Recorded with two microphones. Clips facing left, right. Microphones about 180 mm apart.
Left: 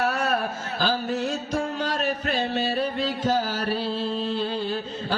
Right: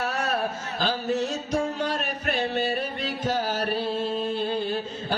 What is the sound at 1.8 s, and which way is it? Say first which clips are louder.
Music: left 2 dB; 55° right (ahead or behind).